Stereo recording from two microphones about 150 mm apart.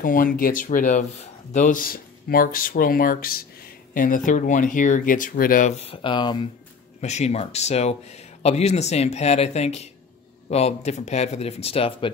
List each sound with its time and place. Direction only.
0.0 s speech: 65° left (ahead or behind); by 6.5 s 30° left (ahead or behind)
7.0 s speech: 50° left (ahead or behind)